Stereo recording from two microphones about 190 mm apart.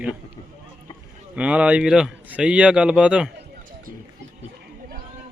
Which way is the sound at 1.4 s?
5° right (ahead or behind).